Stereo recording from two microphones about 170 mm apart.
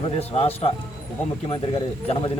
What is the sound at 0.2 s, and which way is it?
Speech, 35° left (ahead or behind).